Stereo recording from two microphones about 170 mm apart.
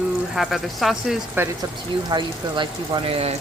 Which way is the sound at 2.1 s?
25° right (ahead or behind).